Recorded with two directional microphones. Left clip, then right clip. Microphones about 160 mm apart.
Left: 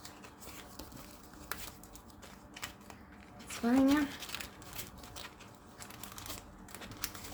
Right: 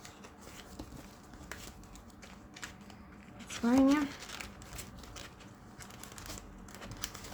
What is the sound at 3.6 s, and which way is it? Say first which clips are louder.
Speech: right 1 dB; 10° right (ahead or behind).